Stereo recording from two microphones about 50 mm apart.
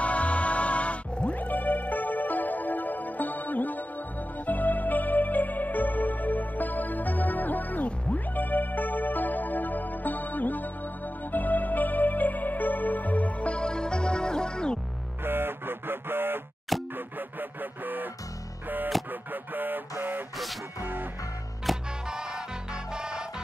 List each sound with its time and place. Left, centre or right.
0.0 s music: left
15.2 s music: right
18.9 s music: centre
19.3 s music: right
21.7 s music: centre
22.1 s music: centre